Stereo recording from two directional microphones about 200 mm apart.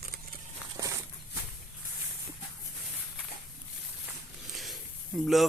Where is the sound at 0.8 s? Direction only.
15° right (ahead or behind).